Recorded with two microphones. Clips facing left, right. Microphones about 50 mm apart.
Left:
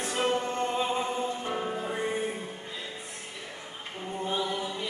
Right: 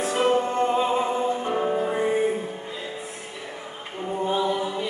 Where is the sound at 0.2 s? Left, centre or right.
Right.